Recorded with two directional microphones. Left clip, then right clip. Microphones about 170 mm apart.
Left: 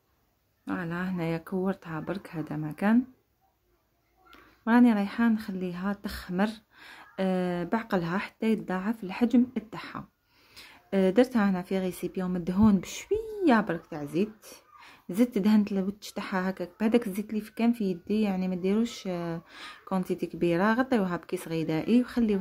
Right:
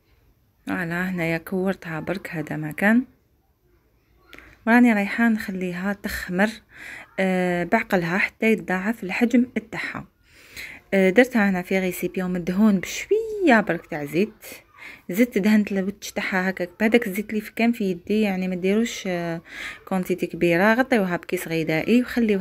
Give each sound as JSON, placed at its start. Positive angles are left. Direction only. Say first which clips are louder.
{"t": 0.7, "sound": "a woman's voice", "louder": "right 7 dB", "side_deg": -15}
{"t": 4.6, "sound": "a woman's voice", "louder": "right 6 dB", "side_deg": -15}
{"t": 10.5, "sound": "a sound", "louder": "right 8 dB", "side_deg": -15}
{"t": 11.3, "sound": "a woman's voice", "louder": "right 7 dB", "side_deg": -15}